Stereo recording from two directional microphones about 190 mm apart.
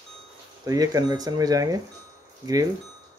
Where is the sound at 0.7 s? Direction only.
20° right (ahead or behind).